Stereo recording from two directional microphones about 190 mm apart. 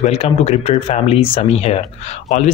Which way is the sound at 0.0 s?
30° left (ahead or behind).